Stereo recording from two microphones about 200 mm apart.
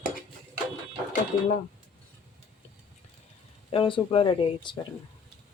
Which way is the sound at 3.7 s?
25° left (ahead or behind).